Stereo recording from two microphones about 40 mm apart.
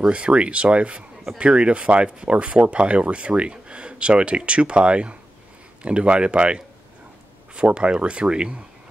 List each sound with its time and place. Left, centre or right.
0.1 s speech: right